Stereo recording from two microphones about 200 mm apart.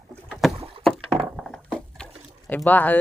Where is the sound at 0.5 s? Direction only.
30° right (ahead or behind).